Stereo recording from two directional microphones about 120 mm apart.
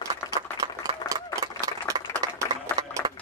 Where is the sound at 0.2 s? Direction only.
30° left (ahead or behind).